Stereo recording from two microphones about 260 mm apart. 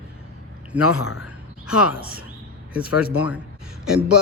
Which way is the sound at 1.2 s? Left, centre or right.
Centre.